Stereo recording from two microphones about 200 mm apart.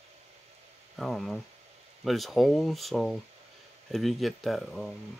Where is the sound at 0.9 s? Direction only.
Centre (ahead or behind).